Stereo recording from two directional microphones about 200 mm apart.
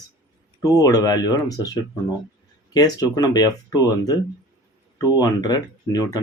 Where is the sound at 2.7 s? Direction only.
20° left (ahead or behind).